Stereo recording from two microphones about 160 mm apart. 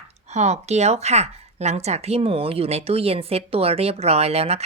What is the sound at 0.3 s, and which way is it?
Speech, 45° right (ahead or behind).